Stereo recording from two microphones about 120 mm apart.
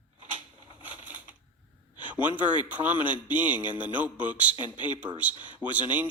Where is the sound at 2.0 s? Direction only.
15° right (ahead or behind).